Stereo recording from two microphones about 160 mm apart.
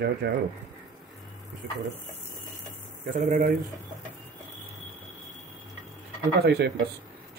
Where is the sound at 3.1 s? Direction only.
55° right (ahead or behind).